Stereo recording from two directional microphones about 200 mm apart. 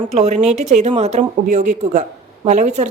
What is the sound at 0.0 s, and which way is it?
Speech, 35° right (ahead or behind).